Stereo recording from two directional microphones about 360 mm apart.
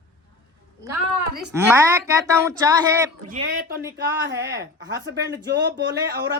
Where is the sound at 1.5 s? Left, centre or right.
Centre.